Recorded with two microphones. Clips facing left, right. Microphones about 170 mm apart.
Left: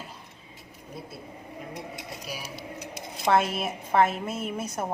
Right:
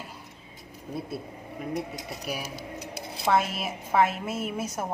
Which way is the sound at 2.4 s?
40° right (ahead or behind).